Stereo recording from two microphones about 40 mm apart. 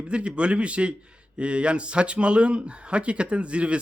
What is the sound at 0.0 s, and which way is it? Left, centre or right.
Speech, right.